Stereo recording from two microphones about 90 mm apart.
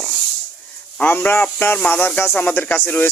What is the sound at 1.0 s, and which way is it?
Speech, 20° left (ahead or behind).